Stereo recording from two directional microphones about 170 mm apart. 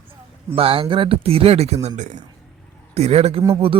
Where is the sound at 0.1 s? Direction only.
35° right (ahead or behind).